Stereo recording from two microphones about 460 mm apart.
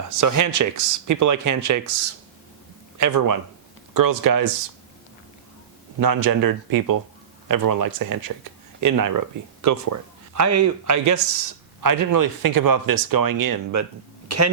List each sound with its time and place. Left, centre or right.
0.2 s speech: right
6.0 s speech: right